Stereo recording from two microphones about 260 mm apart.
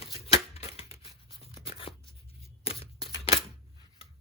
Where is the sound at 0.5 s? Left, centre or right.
Left.